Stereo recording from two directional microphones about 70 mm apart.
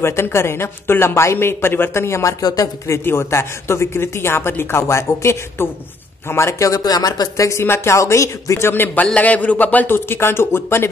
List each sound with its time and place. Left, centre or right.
0.0 s speech: left
2.4 s speech: left
3.0 s speech: left
6.8 s speech: left
9.0 s speech: centre; by 10.9 s left